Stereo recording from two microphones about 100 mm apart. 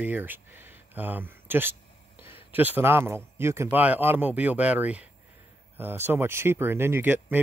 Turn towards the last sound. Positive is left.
turn(degrees=-20)  # may be behind; listen again after turning